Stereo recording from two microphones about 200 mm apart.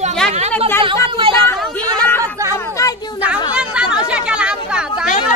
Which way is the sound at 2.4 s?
15° right (ahead or behind).